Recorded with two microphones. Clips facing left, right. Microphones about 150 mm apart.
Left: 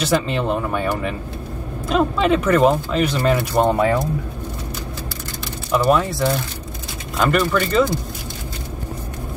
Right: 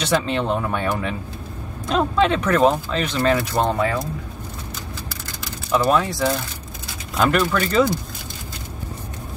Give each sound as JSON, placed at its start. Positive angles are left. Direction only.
{"t": 0.0, "sound": "speech", "side_deg": 5}
{"t": 5.7, "sound": "speech", "side_deg": 0}